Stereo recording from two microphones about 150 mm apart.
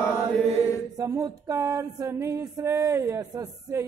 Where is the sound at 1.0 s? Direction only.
25° right (ahead or behind).